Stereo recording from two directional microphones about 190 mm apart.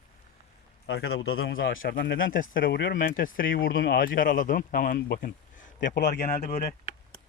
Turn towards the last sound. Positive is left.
turn(degrees=40)  # may be behind; listen again after turning